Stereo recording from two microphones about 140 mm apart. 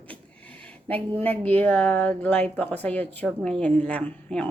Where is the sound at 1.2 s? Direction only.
10° left (ahead or behind).